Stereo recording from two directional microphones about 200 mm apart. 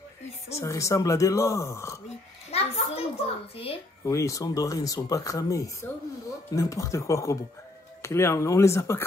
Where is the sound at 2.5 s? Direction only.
30° left (ahead or behind).